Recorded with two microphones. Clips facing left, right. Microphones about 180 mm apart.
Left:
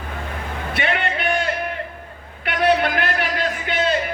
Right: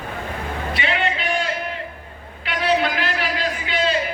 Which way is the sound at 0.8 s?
55° left (ahead or behind).